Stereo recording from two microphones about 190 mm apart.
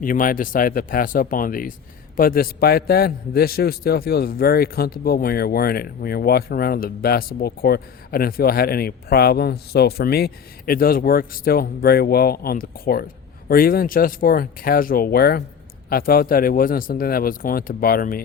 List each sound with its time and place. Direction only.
0.0 s a man's voice: 45° left (ahead or behind)